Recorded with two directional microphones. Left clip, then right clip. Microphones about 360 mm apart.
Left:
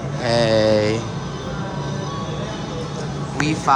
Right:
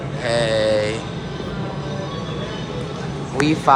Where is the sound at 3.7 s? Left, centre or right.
Centre.